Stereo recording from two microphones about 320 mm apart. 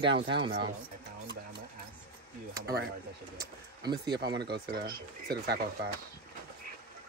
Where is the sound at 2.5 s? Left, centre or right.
Right.